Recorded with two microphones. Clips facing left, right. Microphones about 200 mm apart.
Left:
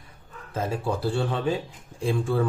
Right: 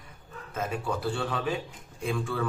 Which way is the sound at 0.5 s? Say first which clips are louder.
Left 4 dB; 30° left (ahead or behind).